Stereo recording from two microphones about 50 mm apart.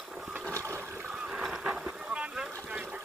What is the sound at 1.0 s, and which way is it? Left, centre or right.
Boat, centre.